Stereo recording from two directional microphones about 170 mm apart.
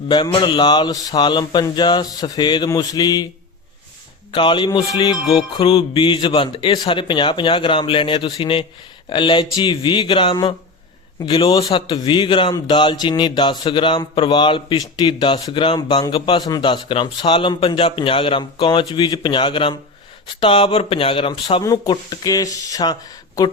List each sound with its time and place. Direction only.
0.1 s speech: 25° left (ahead or behind)
4.3 s speech: 30° left (ahead or behind)